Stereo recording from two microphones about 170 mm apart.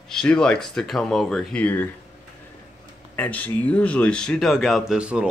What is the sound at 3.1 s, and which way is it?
A man's voice, 10° left (ahead or behind).